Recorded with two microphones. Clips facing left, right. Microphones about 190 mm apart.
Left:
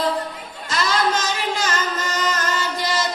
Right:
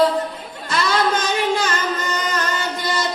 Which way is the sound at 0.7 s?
55° right (ahead or behind).